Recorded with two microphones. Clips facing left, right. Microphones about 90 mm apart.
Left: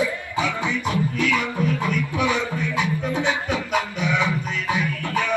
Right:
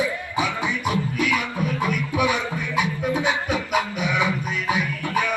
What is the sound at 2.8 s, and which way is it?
Music, 15° right (ahead or behind).